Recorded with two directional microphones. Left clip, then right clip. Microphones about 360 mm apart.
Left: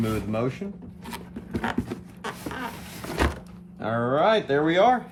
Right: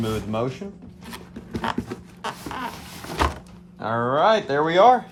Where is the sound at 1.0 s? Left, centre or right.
Centre.